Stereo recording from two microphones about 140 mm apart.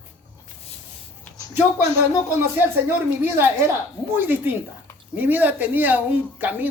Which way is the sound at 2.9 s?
15° right (ahead or behind).